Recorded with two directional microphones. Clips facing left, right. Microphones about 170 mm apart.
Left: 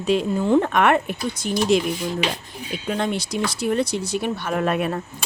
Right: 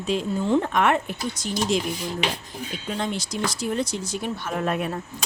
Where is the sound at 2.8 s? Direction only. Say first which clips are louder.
Left 5 dB; 60° left (ahead or behind).